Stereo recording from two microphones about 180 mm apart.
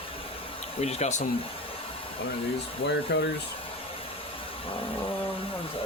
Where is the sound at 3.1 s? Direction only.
70° left (ahead or behind).